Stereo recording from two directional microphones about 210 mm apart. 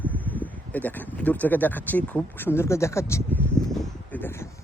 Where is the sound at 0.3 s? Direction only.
10° left (ahead or behind).